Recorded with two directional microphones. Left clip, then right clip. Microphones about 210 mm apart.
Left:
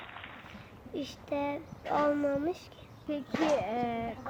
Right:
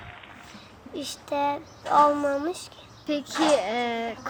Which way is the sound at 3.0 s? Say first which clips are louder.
Right 7 dB; 60° right (ahead or behind).